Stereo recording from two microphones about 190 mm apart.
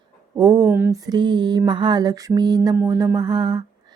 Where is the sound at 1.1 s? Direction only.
25° right (ahead or behind).